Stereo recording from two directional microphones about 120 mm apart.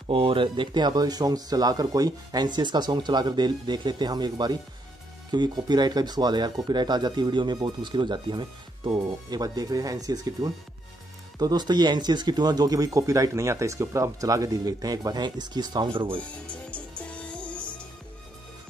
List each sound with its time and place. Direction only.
0.1 s speech: 45° right (ahead or behind)
16.2 s speech: 10° left (ahead or behind)
17.1 s music: 10° left (ahead or behind)